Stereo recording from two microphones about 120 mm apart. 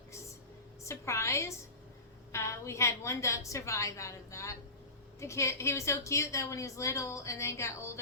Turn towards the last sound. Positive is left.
turn(degrees=25)  # may be behind; listen again after turning